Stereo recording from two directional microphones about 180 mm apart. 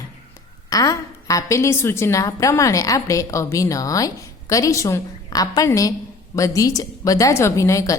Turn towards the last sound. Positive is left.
turn(degrees=15)  # may be behind; listen again after turning